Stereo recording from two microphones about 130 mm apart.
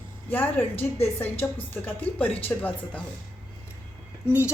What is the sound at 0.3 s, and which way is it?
A woman's voice, 15° left (ahead or behind).